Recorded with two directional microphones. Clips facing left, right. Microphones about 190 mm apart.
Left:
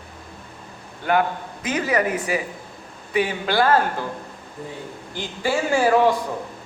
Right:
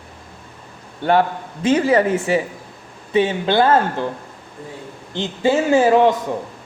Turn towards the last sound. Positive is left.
turn(degrees=-20)  # may be behind; listen again after turning